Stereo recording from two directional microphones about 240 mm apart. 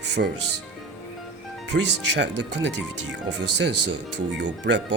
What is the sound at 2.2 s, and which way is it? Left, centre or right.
Speech, right.